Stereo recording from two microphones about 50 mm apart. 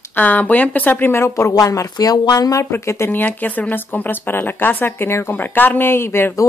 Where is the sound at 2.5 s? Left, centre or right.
Left.